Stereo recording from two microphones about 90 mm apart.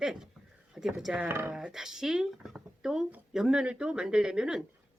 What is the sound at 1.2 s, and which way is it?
Speech, 25° right (ahead or behind).